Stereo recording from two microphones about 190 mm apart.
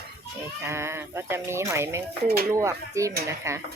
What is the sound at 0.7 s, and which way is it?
Speech, 15° right (ahead or behind).